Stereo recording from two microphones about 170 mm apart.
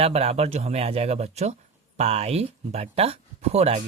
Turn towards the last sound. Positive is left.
turn(degrees=-40)  # may be behind; listen again after turning